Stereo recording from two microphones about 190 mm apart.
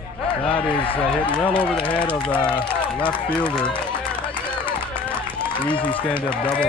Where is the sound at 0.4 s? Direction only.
25° left (ahead or behind).